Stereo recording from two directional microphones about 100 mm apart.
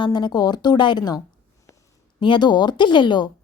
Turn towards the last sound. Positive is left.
turn(degrees=50)  # may be behind; listen again after turning